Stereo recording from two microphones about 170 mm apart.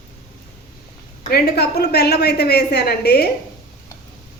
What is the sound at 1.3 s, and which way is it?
A woman's voice, 70° left (ahead or behind).